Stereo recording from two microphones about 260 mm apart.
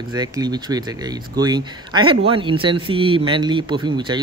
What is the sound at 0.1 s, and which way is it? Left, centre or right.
Speech, centre.